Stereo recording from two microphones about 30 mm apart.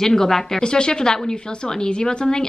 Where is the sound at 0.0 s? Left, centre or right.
Centre.